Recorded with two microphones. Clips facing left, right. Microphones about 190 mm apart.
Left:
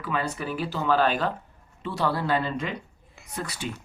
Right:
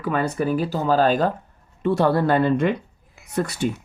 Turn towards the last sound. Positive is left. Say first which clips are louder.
# right 10 dB
turn(degrees=-50)  # may be behind; listen again after turning